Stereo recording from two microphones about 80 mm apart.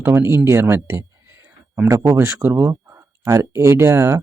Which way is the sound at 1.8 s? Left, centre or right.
Right.